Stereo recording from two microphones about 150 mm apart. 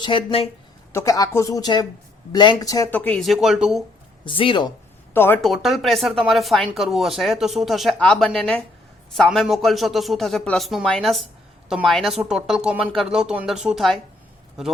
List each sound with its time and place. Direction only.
0.0 s speech: 35° left (ahead or behind)
0.9 s speech: 20° left (ahead or behind)
2.9 s speech: 10° left (ahead or behind)
4.3 s speech: 35° left (ahead or behind)
5.1 s speech: 15° left (ahead or behind)
5.4 s speech: centre (ahead or behind)